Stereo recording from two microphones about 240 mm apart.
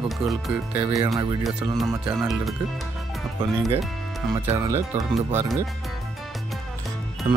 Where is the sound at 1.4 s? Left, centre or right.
Centre.